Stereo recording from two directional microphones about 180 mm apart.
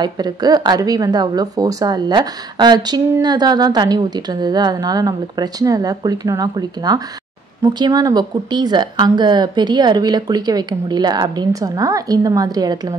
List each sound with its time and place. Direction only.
0.0 s speech: 20° right (ahead or behind)